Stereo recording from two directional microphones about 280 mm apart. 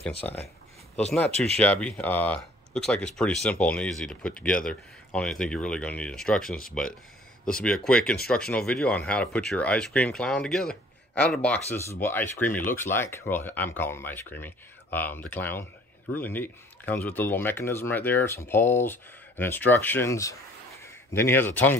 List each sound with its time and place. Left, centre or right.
0.1 s speech: left
1.6 s speech: centre